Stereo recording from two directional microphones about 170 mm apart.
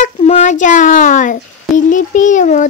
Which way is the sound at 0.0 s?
40° left (ahead or behind).